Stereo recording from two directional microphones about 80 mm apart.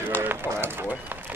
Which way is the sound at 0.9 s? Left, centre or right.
Right.